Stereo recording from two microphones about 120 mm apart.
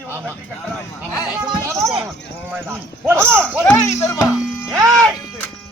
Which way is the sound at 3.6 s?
25° left (ahead or behind).